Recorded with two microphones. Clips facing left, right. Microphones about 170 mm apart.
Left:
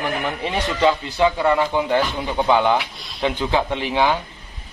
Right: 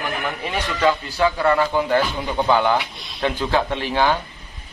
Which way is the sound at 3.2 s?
15° left (ahead or behind).